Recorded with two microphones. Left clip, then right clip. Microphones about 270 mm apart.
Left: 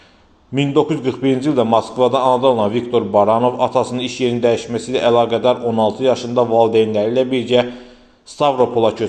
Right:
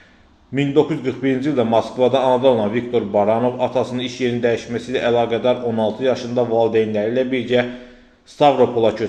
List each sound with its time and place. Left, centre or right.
0.5 s a man's voice: centre